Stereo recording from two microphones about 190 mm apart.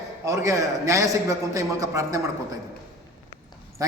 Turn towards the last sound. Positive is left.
turn(degrees=-20)  # may be behind; listen again after turning